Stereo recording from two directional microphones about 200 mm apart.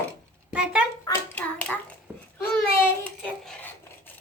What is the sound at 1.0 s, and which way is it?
Speech, 10° left (ahead or behind).